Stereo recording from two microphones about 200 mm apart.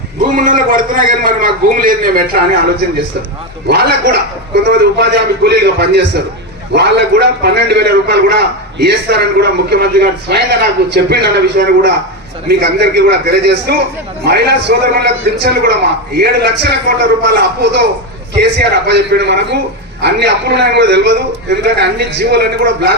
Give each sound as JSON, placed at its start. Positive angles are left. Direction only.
{"t": 0.3, "sound": "a man's voice", "side_deg": -40}
{"t": 3.7, "sound": "a man's voice", "side_deg": -55}